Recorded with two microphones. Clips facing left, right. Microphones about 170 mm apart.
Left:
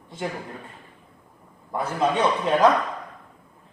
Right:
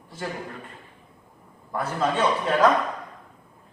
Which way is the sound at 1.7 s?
15° left (ahead or behind).